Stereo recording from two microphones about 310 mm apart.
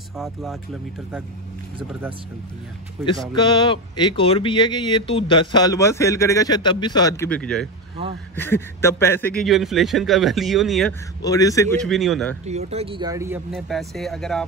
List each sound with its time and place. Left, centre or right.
0.1 s a man's voice: centre
1.8 s speech: centre
3.3 s a man's voice: centre
11.2 s a man's voice: centre
12.4 s a man's voice: right; by 14.4 s centre